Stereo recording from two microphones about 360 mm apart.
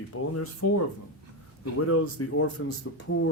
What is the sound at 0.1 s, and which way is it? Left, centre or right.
Speech, left.